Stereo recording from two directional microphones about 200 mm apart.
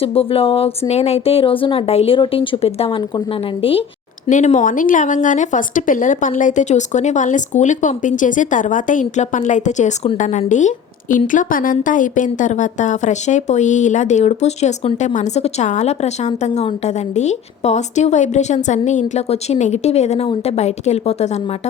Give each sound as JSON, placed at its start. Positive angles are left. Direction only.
{"t": 0.0, "sound": "a woman's voice", "side_deg": 30}